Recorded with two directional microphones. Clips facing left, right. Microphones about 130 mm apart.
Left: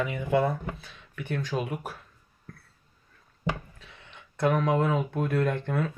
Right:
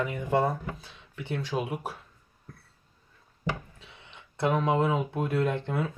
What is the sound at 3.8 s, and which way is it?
Speech, 25° right (ahead or behind).